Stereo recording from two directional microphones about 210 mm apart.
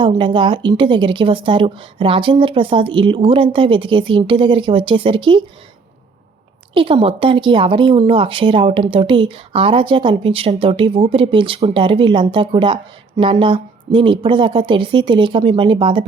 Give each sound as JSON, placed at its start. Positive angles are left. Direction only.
{"t": 0.0, "sound": "speech", "side_deg": -20}
{"t": 6.7, "sound": "speech", "side_deg": -25}